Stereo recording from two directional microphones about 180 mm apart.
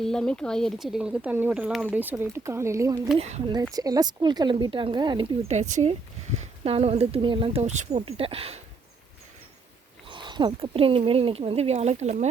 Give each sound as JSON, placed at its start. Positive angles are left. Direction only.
{"t": 0.0, "sound": "speech", "side_deg": 5}
{"t": 3.2, "sound": "speech", "side_deg": -40}
{"t": 3.4, "sound": "speech", "side_deg": -20}
{"t": 10.1, "sound": "speech", "side_deg": -25}